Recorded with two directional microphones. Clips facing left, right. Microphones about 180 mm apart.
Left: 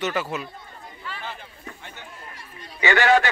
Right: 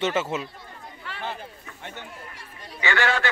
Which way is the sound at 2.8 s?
15° left (ahead or behind).